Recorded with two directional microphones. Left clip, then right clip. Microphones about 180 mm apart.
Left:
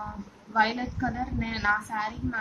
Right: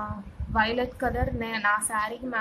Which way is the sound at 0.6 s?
30° right (ahead or behind).